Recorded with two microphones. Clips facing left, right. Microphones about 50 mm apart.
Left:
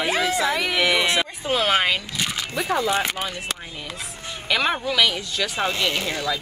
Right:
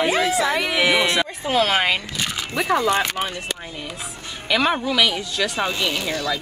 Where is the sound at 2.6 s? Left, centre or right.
Right.